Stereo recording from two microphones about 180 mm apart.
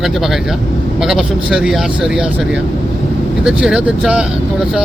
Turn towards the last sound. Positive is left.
turn(degrees=-5)  # may be behind; listen again after turning